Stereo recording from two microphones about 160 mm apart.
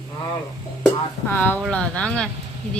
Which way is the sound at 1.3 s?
10° left (ahead or behind).